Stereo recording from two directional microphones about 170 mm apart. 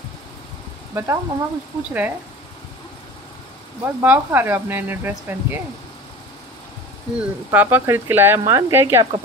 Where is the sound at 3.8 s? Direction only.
10° right (ahead or behind).